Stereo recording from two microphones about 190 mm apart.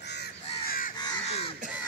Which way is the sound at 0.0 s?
60° left (ahead or behind).